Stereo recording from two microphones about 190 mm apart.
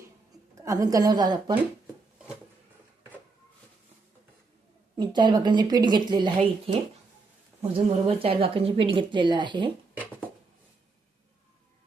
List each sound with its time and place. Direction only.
0.5 s a woman's voice: 15° right (ahead or behind)
4.9 s a woman's voice: 20° right (ahead or behind)
7.6 s a woman's voice: 30° right (ahead or behind)